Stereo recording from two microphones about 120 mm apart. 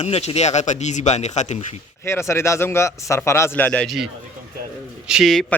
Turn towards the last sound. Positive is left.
turn(degrees=0)  # may be behind; listen again after turning